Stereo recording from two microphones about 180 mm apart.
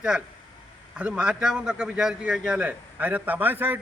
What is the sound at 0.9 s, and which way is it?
A man's voice, 5° right (ahead or behind).